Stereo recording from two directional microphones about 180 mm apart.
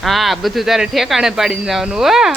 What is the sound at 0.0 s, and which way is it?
Speech, centre (ahead or behind).